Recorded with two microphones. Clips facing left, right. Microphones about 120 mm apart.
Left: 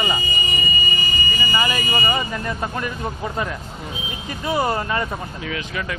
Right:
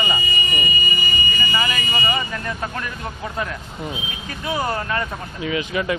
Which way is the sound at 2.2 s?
15° left (ahead or behind).